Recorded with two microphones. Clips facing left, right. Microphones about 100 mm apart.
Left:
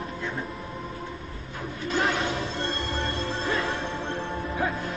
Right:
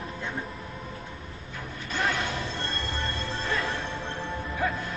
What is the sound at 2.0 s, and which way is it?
Music, 30° left (ahead or behind).